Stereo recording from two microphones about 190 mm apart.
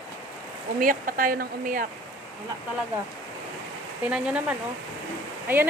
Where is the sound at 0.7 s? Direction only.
45° right (ahead or behind).